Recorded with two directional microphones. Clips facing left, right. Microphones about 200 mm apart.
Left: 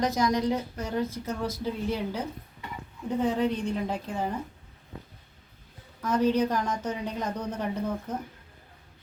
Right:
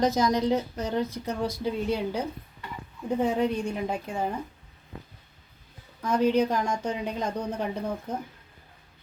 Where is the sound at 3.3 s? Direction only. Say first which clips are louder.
Right 1 dB; 10° right (ahead or behind).